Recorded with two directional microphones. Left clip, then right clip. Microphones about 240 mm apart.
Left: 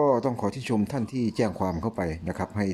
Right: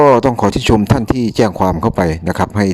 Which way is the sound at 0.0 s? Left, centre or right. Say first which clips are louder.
Right 14 dB; right.